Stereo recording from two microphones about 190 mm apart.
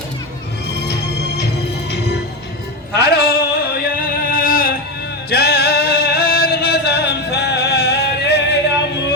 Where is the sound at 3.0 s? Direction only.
55° left (ahead or behind).